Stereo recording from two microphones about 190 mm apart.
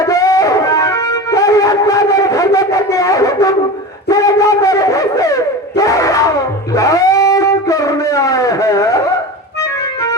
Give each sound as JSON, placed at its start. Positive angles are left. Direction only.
{"t": 0.0, "sound": "music", "side_deg": 20}
{"t": 4.1, "sound": "a sound", "side_deg": 20}
{"t": 9.6, "sound": "music", "side_deg": 15}